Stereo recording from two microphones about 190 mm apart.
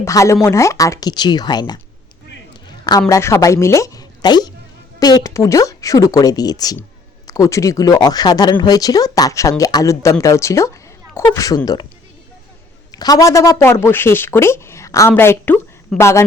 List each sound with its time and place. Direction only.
0.0 s speech: 15° left (ahead or behind)
2.5 s a sound: 20° left (ahead or behind)
3.1 s speech: 15° left (ahead or behind)
12.9 s speech: 20° left (ahead or behind)